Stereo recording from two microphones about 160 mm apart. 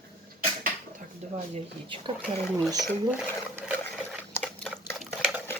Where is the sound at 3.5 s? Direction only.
10° right (ahead or behind).